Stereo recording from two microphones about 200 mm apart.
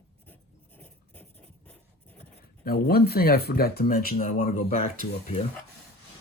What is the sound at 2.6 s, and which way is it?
Speech, 50° left (ahead or behind).